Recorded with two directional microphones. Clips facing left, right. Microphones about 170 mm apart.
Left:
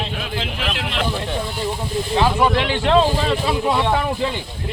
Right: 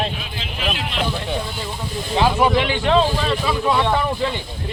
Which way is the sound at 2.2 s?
15° right (ahead or behind).